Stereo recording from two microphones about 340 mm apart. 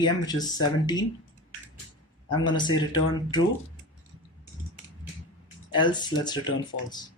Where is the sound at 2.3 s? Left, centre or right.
Centre.